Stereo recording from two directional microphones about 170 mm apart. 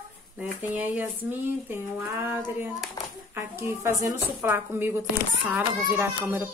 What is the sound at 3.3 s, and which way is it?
A child's voice, 15° right (ahead or behind).